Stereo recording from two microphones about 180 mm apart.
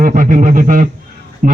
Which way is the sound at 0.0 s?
50° right (ahead or behind).